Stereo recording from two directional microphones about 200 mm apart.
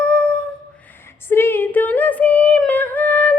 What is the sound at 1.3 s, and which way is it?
Female singing, 10° left (ahead or behind).